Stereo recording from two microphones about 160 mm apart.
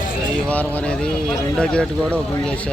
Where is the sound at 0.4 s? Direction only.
10° left (ahead or behind).